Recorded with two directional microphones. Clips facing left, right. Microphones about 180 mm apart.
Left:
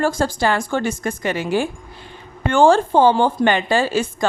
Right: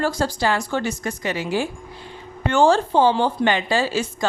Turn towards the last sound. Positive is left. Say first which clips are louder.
# left 3 dB
turn(degrees=50)  # may be behind; listen again after turning